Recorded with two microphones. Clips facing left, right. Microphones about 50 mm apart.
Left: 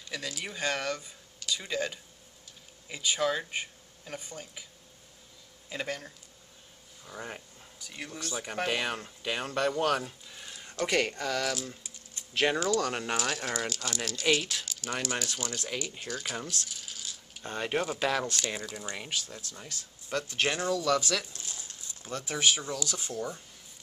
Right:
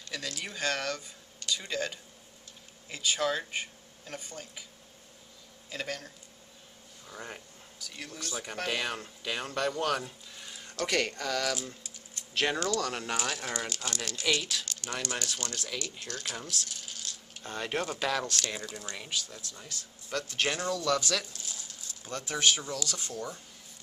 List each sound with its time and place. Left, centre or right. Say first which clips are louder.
0.1 s speech: left 1 dB; centre
5.7 s speech: left 2 dB; centre
10.7 s speech: left 2 dB; centre
13.1 s speech: left 2 dB; centre
15.6 s speech: left 2 dB; centre
16.6 s rattle: even; centre
17.4 s speech: left 2 dB; centre
18.8 s speech: left 1 dB; centre
21.3 s a sound: even; left
22.0 s speech: even; centre